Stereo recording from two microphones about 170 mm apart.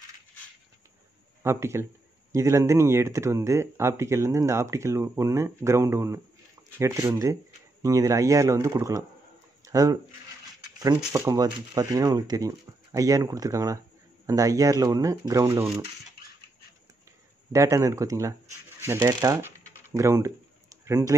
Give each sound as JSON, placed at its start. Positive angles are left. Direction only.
{"t": 1.4, "sound": "speech", "side_deg": -15}
{"t": 11.1, "sound": "speech", "side_deg": -20}
{"t": 17.5, "sound": "speech", "side_deg": -15}